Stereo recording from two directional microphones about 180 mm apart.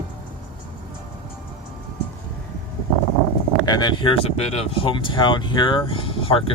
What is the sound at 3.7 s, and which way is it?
Speech, 25° left (ahead or behind).